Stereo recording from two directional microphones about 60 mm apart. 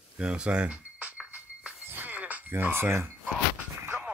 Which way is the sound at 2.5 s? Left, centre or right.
Right.